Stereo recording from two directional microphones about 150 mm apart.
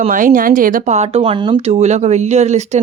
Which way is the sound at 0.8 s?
45° right (ahead or behind).